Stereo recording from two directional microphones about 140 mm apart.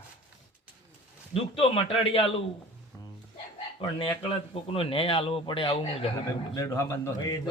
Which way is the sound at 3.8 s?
40° left (ahead or behind).